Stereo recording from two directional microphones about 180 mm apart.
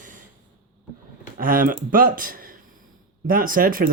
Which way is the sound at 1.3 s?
50° right (ahead or behind).